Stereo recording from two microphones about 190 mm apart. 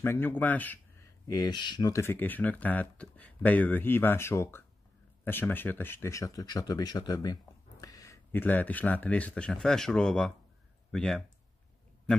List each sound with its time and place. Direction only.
0.0 s speech: 10° left (ahead or behind)
1.2 s speech: 20° left (ahead or behind); by 11.2 s centre (ahead or behind)